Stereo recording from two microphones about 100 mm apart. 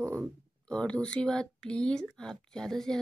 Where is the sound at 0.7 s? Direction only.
10° left (ahead or behind).